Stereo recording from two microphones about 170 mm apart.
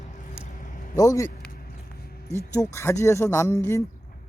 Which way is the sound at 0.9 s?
20° left (ahead or behind).